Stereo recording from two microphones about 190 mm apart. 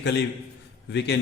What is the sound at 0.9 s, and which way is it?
Speech, 65° left (ahead or behind).